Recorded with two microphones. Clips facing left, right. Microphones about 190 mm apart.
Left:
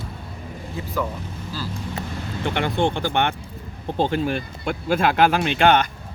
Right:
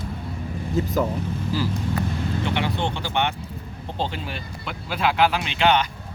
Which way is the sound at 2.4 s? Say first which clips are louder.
Left 6 dB; 50° left (ahead or behind).